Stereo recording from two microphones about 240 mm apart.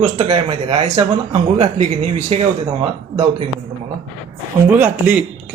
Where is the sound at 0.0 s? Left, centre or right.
Right.